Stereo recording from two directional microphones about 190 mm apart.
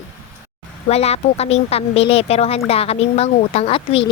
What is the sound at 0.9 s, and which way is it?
Speech, 35° left (ahead or behind).